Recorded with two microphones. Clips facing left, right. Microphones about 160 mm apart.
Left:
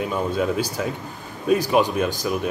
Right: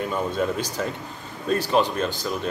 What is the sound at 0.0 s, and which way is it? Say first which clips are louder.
Speech: left 2 dB; 5° left (ahead or behind).